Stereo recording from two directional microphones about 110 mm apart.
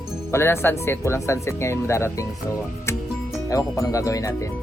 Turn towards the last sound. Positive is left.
turn(degrees=30)  # may be behind; listen again after turning